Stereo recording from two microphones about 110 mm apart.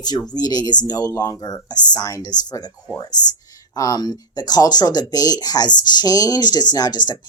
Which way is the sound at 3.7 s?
35° left (ahead or behind).